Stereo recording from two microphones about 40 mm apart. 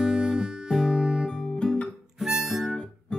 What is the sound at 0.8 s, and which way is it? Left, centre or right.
Music, centre.